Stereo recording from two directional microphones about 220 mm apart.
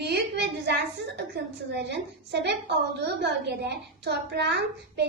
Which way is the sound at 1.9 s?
50° right (ahead or behind).